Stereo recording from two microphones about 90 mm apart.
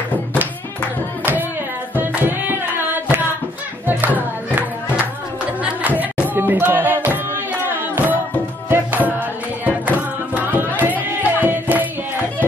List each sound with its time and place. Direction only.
2.0 s music: 20° right (ahead or behind)